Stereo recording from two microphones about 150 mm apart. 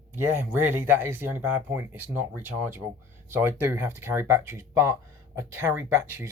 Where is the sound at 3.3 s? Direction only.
15° right (ahead or behind).